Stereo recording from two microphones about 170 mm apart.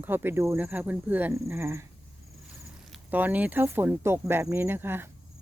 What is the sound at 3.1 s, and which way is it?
Speech, 10° right (ahead or behind).